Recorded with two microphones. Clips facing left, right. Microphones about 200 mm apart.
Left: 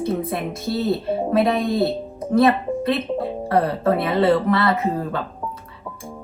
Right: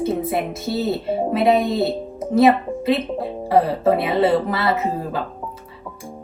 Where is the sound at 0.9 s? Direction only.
Centre (ahead or behind).